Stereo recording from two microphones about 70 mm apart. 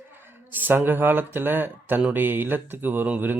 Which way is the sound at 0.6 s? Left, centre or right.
Right.